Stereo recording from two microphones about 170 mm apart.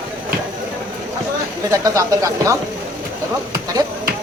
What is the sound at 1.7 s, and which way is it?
Speech, 20° right (ahead or behind).